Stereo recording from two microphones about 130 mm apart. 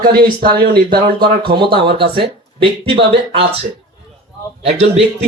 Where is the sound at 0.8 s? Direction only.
40° right (ahead or behind).